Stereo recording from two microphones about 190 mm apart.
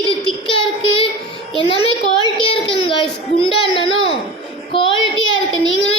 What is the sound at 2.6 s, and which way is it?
Child singing, 25° left (ahead or behind).